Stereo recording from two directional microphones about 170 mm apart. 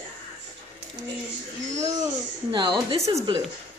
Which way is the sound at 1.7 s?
45° right (ahead or behind).